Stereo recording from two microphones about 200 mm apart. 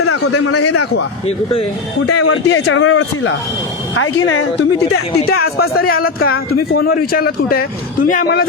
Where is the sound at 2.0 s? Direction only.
90° left.